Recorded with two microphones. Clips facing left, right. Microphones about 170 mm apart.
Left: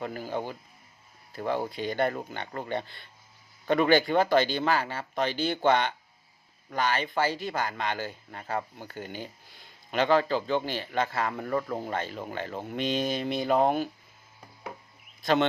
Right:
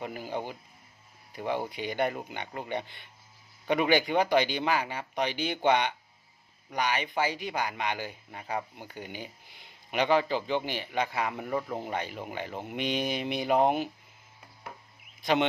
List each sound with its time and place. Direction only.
0.0 s speech: 15° right (ahead or behind)